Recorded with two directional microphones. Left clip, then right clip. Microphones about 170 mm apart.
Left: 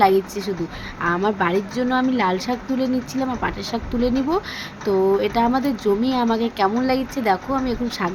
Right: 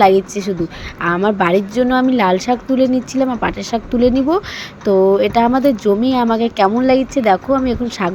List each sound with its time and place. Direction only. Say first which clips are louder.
0.0 s speech: right 5 dB; 30° right (ahead or behind)